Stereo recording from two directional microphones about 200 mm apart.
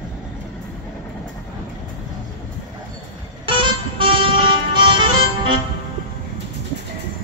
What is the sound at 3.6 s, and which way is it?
Music, 25° right (ahead or behind).